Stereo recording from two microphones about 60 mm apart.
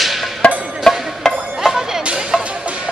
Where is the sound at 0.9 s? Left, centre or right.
Centre.